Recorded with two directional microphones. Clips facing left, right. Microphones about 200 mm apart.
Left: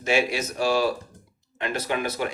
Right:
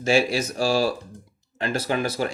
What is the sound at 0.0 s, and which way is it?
Speech, 35° right (ahead or behind).